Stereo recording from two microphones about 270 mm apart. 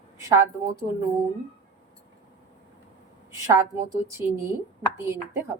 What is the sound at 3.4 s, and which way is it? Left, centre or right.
Speech, centre.